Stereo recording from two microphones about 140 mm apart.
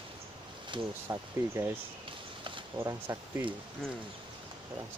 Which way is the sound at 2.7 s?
15° right (ahead or behind).